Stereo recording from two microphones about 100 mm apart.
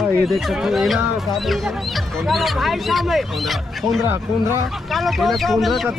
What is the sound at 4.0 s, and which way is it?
Speech, 25° right (ahead or behind).